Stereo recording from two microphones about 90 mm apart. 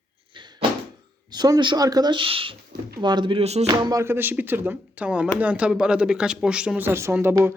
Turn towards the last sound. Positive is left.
turn(degrees=-25)  # may be behind; listen again after turning